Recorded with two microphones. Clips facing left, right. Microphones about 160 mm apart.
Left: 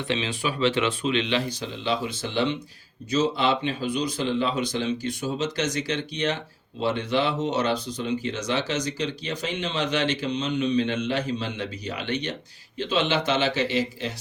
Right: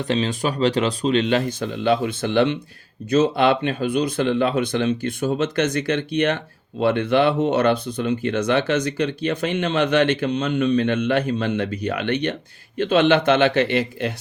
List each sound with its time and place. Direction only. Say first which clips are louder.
0.0 s speech: right 6 dB; 45° right (ahead or behind); by 14.1 s 60° right (ahead or behind)